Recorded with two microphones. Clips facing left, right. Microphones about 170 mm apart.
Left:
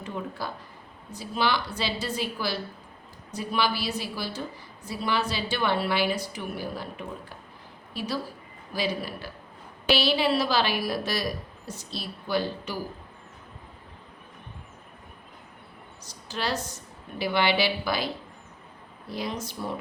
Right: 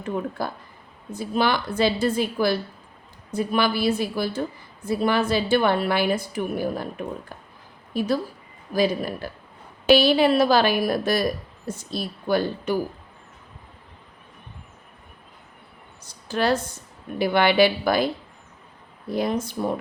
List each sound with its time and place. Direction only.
0.0 s a woman's voice: 50° right (ahead or behind)
7.9 s a woman's voice: 50° right (ahead or behind)
16.0 s a woman's voice: 55° right (ahead or behind)